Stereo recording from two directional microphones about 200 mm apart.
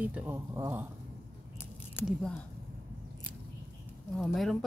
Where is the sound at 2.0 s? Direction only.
5° left (ahead or behind).